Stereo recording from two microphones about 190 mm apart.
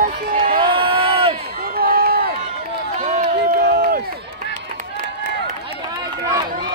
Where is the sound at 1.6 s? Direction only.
50° right (ahead or behind).